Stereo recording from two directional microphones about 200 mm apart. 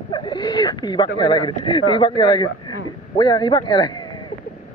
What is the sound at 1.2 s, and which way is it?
A man's voice, 20° left (ahead or behind).